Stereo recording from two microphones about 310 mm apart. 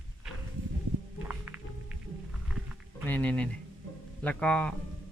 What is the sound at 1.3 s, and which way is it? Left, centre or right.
Music, centre.